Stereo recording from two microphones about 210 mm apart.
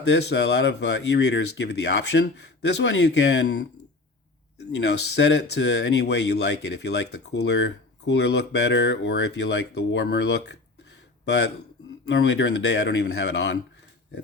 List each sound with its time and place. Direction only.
0.0 s speech: 55° left (ahead or behind)
4.7 s speech: 55° left (ahead or behind)